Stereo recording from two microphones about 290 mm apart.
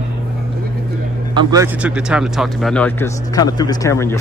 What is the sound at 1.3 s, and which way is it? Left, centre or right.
Speech, centre.